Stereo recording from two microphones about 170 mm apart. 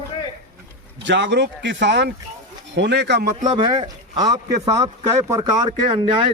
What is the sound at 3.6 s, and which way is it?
Speech, 30° right (ahead or behind).